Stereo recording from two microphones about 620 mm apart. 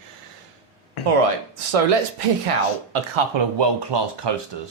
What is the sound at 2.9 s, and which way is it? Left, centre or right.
Speech, right.